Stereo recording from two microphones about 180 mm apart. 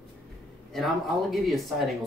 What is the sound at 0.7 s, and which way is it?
Speech, centre (ahead or behind).